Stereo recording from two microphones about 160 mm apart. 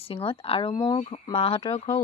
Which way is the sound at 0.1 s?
35° left (ahead or behind).